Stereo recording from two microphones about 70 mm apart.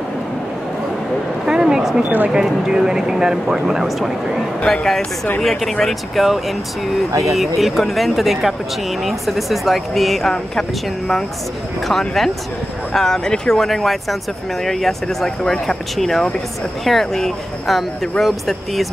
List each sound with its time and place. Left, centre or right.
1.4 s a sound: centre
2.0 s speech: centre
2.3 s speech: centre
11.9 s speech: centre